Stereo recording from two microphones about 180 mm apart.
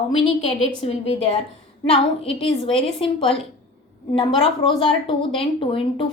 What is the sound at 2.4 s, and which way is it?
A woman's voice, 30° left (ahead or behind).